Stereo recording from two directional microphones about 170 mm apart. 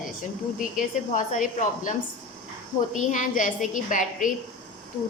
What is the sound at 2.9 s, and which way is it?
A woman's voice, 50° left (ahead or behind).